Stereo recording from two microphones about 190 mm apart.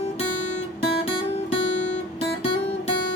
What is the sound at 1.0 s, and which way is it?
Music, 30° left (ahead or behind).